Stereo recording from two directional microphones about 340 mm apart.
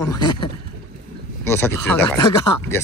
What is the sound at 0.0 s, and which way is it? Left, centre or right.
Speech, centre.